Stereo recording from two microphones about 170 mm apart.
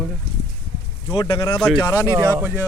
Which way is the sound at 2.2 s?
15° right (ahead or behind).